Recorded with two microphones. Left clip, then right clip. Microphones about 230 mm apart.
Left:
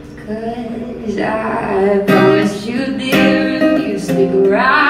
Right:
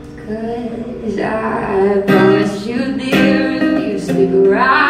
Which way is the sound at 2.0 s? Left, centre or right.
Left.